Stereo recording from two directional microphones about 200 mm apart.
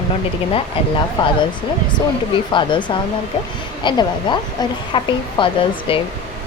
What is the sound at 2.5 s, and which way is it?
Speech, 25° left (ahead or behind).